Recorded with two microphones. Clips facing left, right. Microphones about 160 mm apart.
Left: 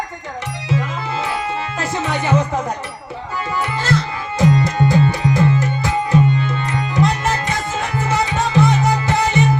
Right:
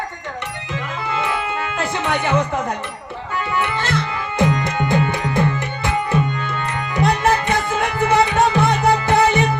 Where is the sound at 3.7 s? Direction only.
60° right (ahead or behind).